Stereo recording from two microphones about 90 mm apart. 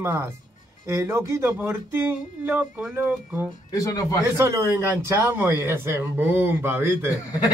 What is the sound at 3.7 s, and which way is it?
Speech, 40° left (ahead or behind).